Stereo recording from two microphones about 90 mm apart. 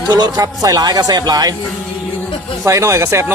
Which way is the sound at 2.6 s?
35° right (ahead or behind).